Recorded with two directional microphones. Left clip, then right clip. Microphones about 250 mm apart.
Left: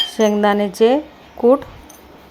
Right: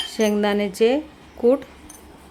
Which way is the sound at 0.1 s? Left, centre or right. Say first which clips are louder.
Left 1 dB; centre.